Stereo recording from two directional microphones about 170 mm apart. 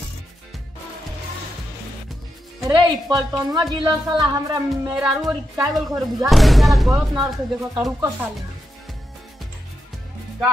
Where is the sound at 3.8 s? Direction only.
20° right (ahead or behind).